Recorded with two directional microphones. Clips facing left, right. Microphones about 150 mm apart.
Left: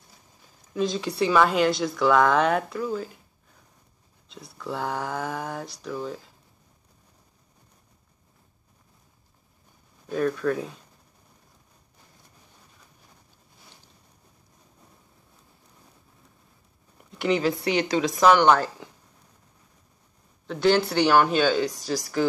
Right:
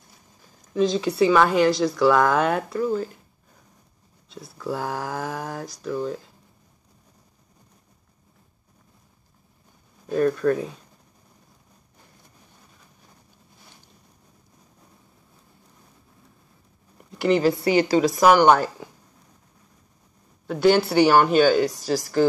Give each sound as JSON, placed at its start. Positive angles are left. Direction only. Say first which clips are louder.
{"t": 0.7, "sound": "a woman's voice", "louder": "right 5 dB", "side_deg": 0}
{"t": 4.3, "sound": "speech", "louder": "right 4 dB", "side_deg": -5}
{"t": 10.0, "sound": "a woman's voice", "louder": "right 4 dB", "side_deg": -5}
{"t": 17.2, "sound": "a woman's voice", "louder": "right 4 dB", "side_deg": 0}
{"t": 20.4, "sound": "speech", "louder": "right 3 dB", "side_deg": -10}